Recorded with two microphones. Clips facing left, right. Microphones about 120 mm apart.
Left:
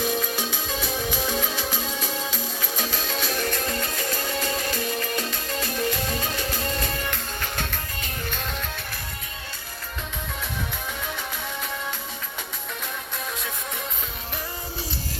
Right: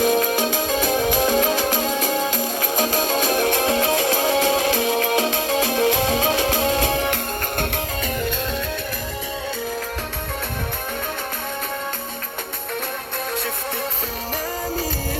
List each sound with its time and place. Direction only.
0.0 s music: 50° right (ahead or behind)
3.5 s music: 90° right